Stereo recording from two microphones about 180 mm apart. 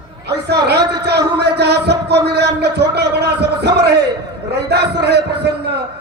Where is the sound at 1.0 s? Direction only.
65° right (ahead or behind).